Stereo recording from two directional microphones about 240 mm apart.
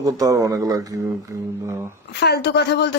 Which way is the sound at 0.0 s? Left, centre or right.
Centre.